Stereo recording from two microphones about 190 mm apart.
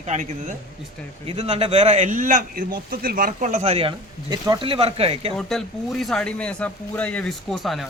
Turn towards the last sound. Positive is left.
turn(degrees=0)  # may be behind; listen again after turning